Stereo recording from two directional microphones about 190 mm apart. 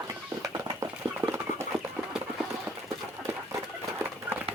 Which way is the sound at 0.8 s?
15° right (ahead or behind).